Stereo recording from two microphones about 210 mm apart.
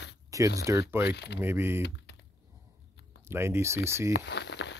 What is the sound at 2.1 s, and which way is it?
Typing, 50° left (ahead or behind).